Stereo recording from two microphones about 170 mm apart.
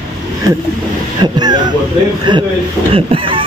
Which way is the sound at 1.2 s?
25° right (ahead or behind).